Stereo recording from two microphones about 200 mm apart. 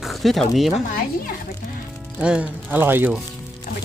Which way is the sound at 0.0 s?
Centre (ahead or behind).